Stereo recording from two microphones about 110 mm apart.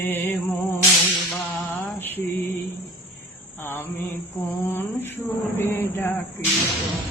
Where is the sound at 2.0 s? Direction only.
20° left (ahead or behind).